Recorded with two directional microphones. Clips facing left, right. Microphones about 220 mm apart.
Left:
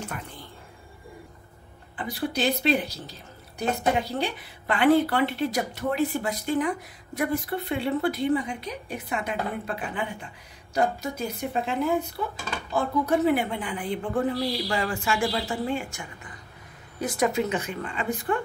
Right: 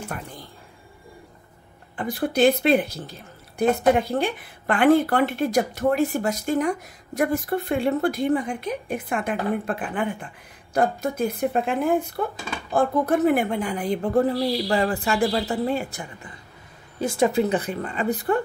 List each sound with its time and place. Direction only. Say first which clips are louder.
2.0 s speech: right 7 dB; 50° right (ahead or behind)